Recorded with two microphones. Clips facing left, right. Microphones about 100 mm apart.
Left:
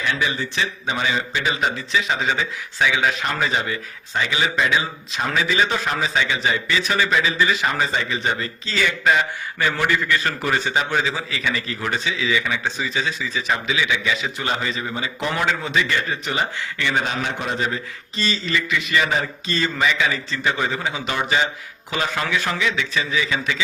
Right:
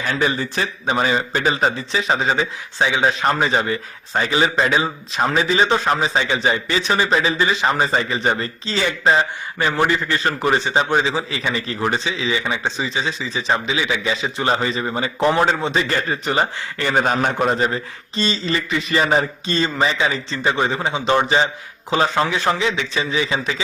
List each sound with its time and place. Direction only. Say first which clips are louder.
0.0 s speech: right 3 dB; 40° right (ahead or behind)